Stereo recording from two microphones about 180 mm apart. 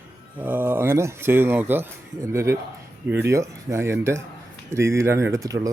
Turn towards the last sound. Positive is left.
turn(degrees=-20)  # may be behind; listen again after turning